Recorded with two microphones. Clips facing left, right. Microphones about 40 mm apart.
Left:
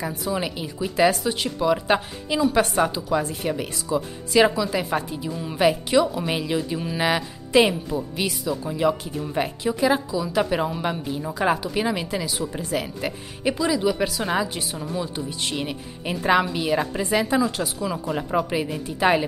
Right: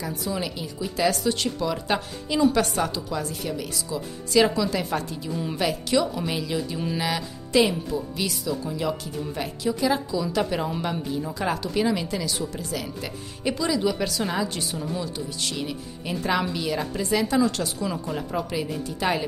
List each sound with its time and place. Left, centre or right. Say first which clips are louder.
0.0 s speech: left 3 dB; left
4.6 s speech: left 1 dB; centre
5.3 s speech: right 1 dB; centre
5.6 s speech: left 5 dB; left
12.5 s speech: left 4 dB; left
13.4 s speech: left 2 dB; centre
15.1 s speech: left 2 dB; left